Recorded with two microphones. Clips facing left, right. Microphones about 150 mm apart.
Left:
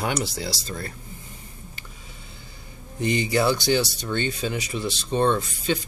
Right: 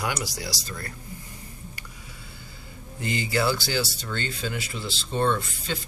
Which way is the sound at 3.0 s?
20° left (ahead or behind).